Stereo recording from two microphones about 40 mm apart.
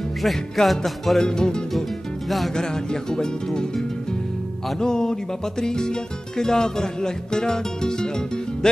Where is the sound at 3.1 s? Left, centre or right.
Centre.